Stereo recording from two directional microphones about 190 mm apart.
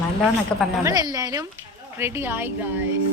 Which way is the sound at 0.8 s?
20° right (ahead or behind).